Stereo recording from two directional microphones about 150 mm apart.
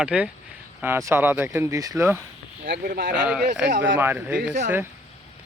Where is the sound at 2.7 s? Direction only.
85° right.